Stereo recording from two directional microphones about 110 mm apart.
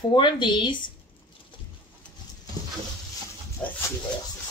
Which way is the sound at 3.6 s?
10° left (ahead or behind).